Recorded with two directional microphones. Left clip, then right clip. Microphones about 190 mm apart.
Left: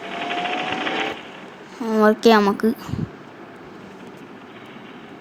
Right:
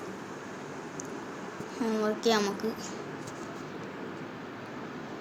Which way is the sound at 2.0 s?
50° left (ahead or behind).